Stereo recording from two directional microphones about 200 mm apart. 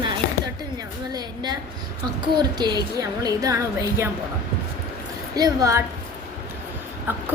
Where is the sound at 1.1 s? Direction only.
20° right (ahead or behind).